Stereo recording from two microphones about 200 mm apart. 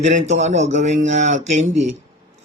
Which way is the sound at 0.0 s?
35° right (ahead or behind).